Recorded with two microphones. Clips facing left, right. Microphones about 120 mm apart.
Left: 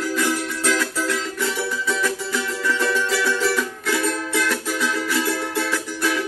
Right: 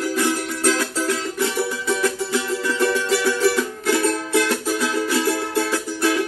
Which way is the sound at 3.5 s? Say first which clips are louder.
Right 3 dB; 35° right (ahead or behind).